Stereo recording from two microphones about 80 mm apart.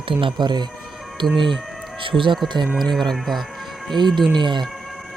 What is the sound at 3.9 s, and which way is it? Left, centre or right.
Speech, right.